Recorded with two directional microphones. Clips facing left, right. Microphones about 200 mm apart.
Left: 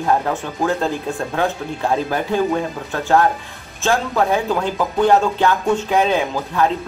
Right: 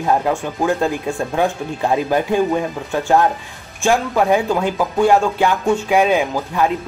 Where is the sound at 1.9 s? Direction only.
15° right (ahead or behind).